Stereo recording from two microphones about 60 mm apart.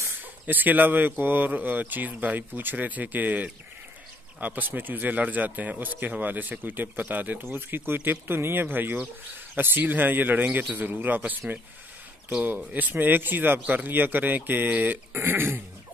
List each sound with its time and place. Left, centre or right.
0.5 s speech: right
12.7 s speech: right